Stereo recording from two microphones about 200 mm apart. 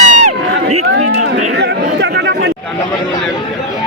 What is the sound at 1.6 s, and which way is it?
Chatter, 60° right (ahead or behind).